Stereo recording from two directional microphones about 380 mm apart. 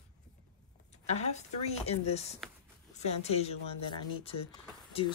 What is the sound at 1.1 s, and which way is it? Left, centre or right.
Speech, centre.